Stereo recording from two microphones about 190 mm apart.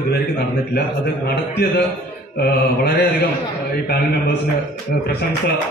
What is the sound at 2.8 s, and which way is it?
Mantra, 60° left (ahead or behind).